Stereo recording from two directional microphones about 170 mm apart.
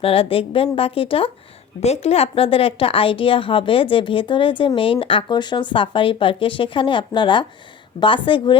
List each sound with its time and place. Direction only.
0.0 s a woman's voice: 35° left (ahead or behind)